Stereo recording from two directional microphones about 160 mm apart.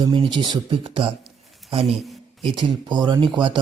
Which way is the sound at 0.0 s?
30° right (ahead or behind).